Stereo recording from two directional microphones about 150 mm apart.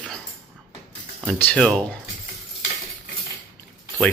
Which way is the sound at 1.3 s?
10° left (ahead or behind).